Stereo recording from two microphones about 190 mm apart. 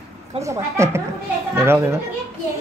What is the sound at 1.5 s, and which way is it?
Speech, 15° right (ahead or behind).